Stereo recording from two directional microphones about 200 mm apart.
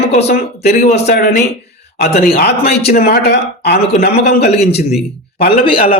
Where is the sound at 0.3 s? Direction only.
55° left (ahead or behind).